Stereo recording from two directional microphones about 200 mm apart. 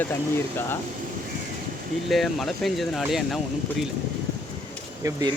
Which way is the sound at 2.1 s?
Centre (ahead or behind).